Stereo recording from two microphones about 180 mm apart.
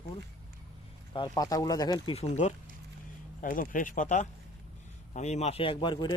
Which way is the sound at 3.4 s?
50° left (ahead or behind).